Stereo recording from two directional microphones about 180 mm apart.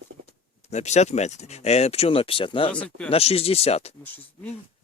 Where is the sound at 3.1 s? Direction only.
35° left (ahead or behind).